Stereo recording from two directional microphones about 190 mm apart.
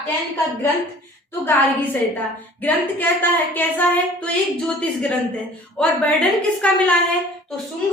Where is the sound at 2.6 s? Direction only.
10° left (ahead or behind).